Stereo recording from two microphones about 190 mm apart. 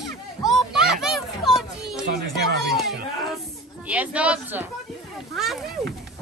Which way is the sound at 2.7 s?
Centre (ahead or behind).